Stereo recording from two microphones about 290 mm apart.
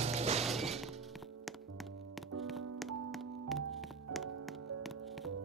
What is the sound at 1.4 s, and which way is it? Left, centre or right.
Music, centre.